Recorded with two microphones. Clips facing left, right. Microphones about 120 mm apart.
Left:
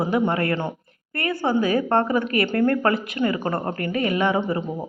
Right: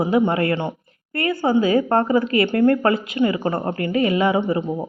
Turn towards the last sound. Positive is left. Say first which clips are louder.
# right 3 dB
turn(degrees=-20)  # may be behind; listen again after turning